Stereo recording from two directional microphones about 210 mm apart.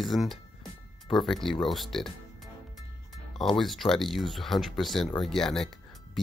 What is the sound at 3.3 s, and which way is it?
Speech, centre (ahead or behind).